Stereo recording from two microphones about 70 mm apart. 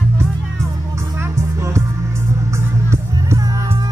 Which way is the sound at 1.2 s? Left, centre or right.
Right.